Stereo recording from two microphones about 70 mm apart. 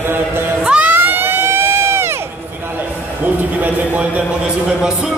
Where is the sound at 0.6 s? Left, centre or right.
Centre; by 2.3 s right.